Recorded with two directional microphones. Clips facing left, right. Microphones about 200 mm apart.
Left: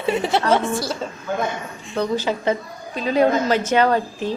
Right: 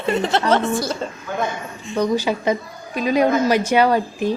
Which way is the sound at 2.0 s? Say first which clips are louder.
Right 2 dB; 15° right (ahead or behind).